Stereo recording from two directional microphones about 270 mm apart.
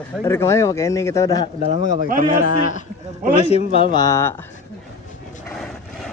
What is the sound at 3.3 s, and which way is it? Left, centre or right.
Speech, left.